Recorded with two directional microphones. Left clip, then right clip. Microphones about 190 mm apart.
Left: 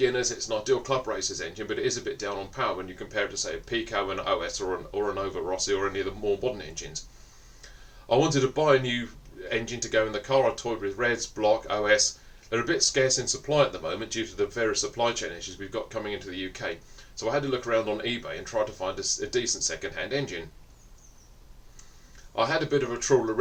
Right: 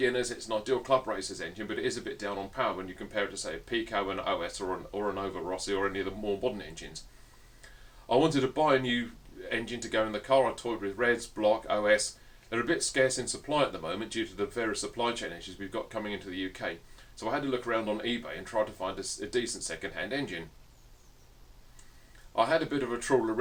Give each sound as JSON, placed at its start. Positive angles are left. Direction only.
{"t": 0.0, "sound": "speech", "side_deg": -25}
{"t": 8.0, "sound": "speech", "side_deg": -25}
{"t": 22.4, "sound": "speech", "side_deg": -25}